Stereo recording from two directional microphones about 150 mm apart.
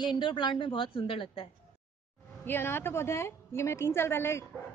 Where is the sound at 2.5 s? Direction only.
15° left (ahead or behind).